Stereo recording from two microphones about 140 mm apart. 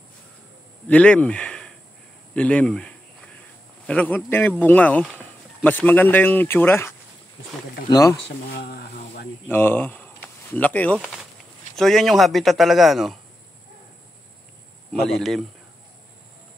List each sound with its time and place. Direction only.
0.8 s speech: 10° left (ahead or behind)
7.9 s speech: 20° left (ahead or behind)
8.5 s speech: 90° left
9.5 s speech: 15° left (ahead or behind); by 13.2 s centre (ahead or behind)
14.9 s speech: centre (ahead or behind)